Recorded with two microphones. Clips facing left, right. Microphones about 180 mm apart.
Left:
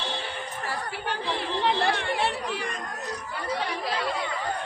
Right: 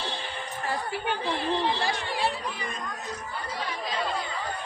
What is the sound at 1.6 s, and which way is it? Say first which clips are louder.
Chatter: left 3 dB; 65° left (ahead or behind).